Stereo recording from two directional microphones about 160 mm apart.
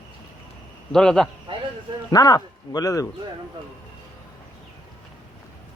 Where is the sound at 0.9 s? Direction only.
5° left (ahead or behind).